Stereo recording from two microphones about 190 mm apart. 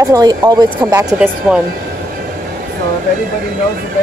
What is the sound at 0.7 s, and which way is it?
Speech, 10° right (ahead or behind).